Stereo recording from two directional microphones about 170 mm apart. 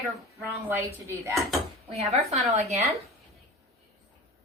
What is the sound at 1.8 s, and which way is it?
Speech, 40° right (ahead or behind).